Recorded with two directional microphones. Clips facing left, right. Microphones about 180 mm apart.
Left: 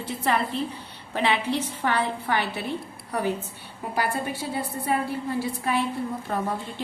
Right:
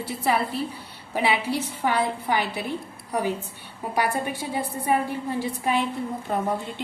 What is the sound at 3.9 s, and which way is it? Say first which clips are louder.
A woman's voice: right 2 dB; 15° right (ahead or behind).